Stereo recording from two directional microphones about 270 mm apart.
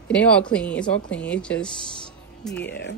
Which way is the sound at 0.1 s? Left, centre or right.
Centre.